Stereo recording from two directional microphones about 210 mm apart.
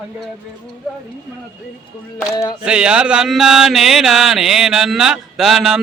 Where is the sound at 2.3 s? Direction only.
15° left (ahead or behind).